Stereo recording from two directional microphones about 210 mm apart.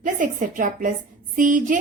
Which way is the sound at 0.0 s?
40° right (ahead or behind).